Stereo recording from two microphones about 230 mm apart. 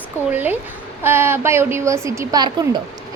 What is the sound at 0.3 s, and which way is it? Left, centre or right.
A woman's voice, centre.